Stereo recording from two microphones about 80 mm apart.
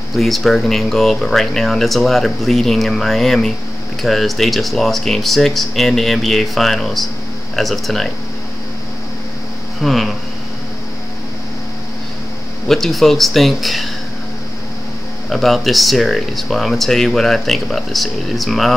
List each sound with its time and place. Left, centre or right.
0.1 s speech: centre
9.8 s speech: centre
12.6 s speech: centre
15.2 s speech: centre